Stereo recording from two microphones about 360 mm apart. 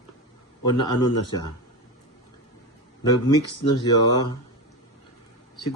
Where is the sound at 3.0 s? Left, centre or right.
Centre.